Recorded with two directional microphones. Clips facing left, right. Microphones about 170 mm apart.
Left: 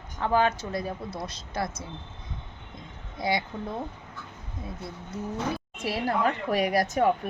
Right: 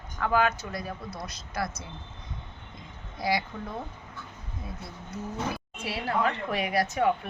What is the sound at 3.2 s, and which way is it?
Speech, 25° left (ahead or behind).